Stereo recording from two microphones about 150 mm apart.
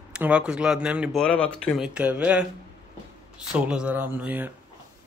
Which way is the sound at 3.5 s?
5° right (ahead or behind).